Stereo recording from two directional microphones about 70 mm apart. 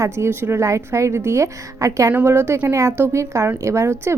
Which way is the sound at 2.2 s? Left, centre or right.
Right.